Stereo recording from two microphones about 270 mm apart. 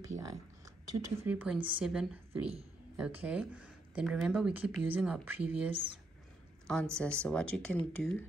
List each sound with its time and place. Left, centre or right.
0.0 s speech: right
1.2 s speech: centre
5.7 s speech: centre
6.7 s speech: centre